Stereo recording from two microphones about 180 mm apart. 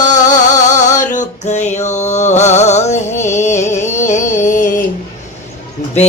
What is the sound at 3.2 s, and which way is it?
Music, 40° left (ahead or behind).